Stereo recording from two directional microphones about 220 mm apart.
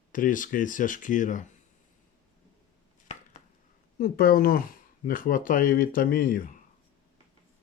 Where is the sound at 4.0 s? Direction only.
40° left (ahead or behind).